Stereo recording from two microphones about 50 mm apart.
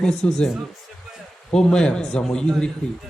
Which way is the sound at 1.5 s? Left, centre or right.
Centre.